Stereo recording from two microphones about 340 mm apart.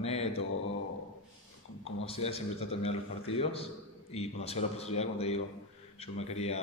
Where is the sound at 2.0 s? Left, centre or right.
Centre.